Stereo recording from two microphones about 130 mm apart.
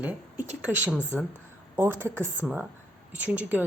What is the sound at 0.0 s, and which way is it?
A woman's voice, 15° right (ahead or behind).